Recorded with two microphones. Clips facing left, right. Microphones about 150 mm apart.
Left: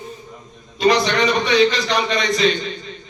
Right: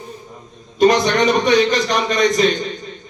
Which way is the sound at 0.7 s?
45° right (ahead or behind).